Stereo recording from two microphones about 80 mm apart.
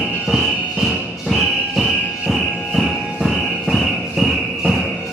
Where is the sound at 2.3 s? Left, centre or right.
Centre.